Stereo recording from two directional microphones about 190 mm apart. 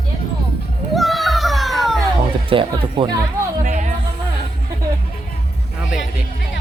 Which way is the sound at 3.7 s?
40° right (ahead or behind).